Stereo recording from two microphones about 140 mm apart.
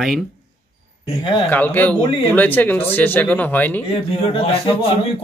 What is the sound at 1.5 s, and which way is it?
Speech, 10° left (ahead or behind).